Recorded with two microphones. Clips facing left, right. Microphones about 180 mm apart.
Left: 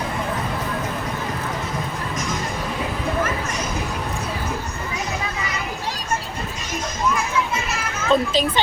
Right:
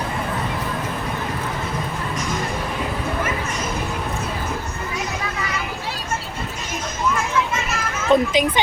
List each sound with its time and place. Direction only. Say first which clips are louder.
8.1 s a child's voice: right 2 dB; 15° right (ahead or behind)